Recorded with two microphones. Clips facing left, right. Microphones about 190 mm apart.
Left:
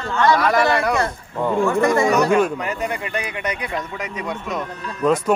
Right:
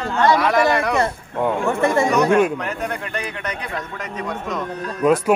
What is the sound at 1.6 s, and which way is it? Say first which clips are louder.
Speech: left 2 dB; 25° right (ahead or behind).